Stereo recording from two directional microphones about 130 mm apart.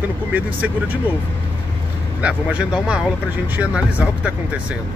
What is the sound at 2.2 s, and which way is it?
Speech, 10° right (ahead or behind).